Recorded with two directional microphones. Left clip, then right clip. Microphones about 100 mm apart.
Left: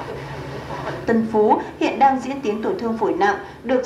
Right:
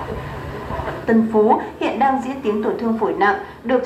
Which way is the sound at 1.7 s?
25° left (ahead or behind).